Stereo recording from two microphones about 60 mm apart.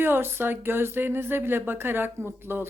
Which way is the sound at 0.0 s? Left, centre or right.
Right.